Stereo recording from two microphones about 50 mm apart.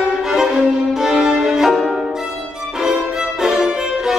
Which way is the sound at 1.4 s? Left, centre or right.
Centre.